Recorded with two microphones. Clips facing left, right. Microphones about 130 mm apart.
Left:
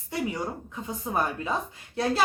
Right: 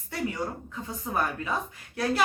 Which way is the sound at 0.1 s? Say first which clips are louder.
Left 1 dB; 20° left (ahead or behind).